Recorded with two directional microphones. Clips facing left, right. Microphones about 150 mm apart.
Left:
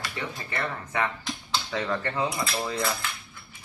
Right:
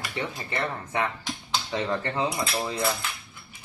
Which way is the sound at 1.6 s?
20° right (ahead or behind).